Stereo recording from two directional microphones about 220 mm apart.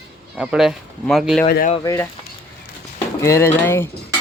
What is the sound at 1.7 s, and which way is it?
Speech, 15° left (ahead or behind).